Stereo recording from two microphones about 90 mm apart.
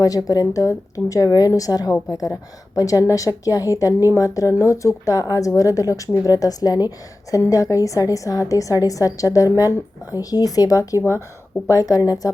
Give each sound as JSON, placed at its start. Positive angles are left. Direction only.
{"t": 0.0, "sound": "a woman's voice", "side_deg": 45}